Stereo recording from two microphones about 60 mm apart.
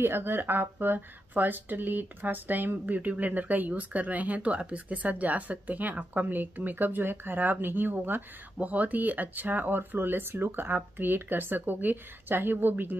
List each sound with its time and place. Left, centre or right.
0.0 s speech: right